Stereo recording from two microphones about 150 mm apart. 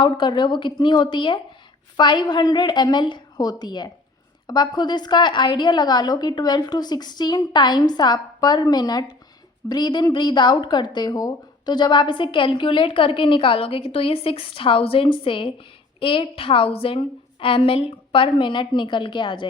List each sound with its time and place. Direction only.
0.0 s a woman's voice: 30° left (ahead or behind)